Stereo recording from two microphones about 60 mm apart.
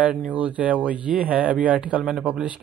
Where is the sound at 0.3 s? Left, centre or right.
Right.